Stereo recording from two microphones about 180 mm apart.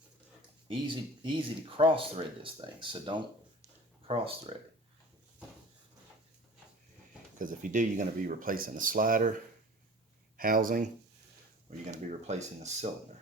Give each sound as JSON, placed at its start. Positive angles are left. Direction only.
{"t": 0.7, "sound": "speech", "side_deg": -25}
{"t": 7.3, "sound": "speech", "side_deg": -45}
{"t": 10.3, "sound": "speech", "side_deg": -50}
{"t": 11.9, "sound": "speech", "side_deg": -40}